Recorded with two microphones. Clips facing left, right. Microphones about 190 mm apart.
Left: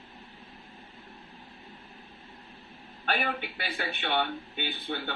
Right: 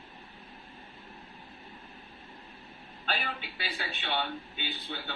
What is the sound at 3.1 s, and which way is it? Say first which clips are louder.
A man's voice: left 5 dB; 55° left (ahead or behind).